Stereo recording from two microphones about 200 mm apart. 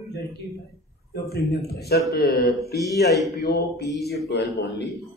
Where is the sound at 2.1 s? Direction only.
55° left (ahead or behind).